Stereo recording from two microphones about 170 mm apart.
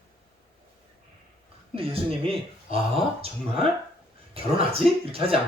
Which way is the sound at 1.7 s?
35° right (ahead or behind).